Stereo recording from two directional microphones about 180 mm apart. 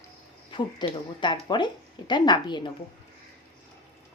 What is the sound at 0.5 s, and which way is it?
Speech, 25° left (ahead or behind).